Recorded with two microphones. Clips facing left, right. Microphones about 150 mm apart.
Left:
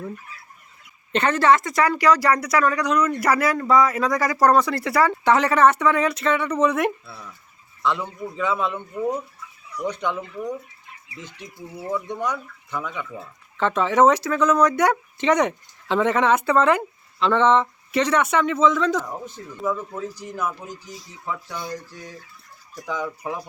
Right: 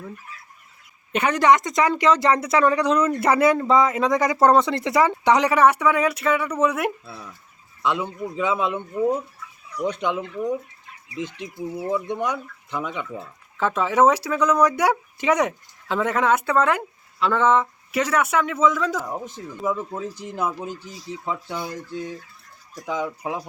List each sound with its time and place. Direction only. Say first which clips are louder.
1.1 s a woman's voice: even; 10° right (ahead or behind)
11.9 s a woman's voice: right 1 dB; 20° right (ahead or behind)
13.6 s speech: left 1 dB; 5° right (ahead or behind)
19.6 s a woman's voice: even; 20° right (ahead or behind)
22.7 s speech: right 2 dB; 15° right (ahead or behind)